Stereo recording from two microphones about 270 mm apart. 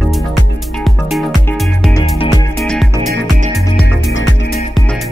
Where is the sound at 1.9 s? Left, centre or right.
Centre.